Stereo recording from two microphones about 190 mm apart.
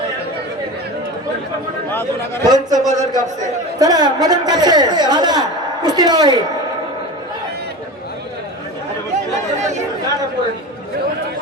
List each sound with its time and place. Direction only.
1.9 s speech: 10° left (ahead or behind)
2.5 s a woman's voice: 20° right (ahead or behind)